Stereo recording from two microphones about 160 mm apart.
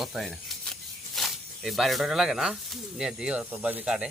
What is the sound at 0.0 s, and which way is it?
Speech, centre (ahead or behind).